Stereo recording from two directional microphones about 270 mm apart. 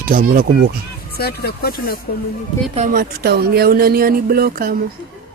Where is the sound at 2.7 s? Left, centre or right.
Right.